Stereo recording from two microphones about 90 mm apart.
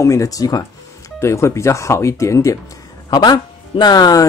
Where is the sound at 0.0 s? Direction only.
35° left (ahead or behind).